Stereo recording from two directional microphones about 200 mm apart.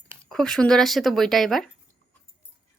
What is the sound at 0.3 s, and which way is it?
A woman's voice, centre (ahead or behind).